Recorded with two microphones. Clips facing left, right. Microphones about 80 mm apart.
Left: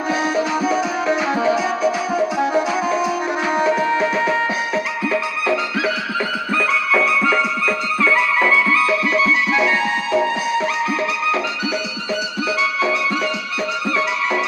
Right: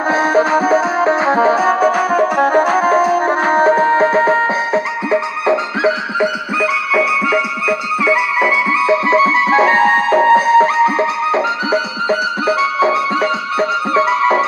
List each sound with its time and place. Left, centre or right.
0.1 s music: right
5.0 s music: right
6.6 s music: centre; by 14.4 s right